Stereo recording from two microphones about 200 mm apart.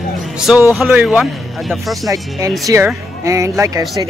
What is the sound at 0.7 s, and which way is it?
Speech, centre (ahead or behind).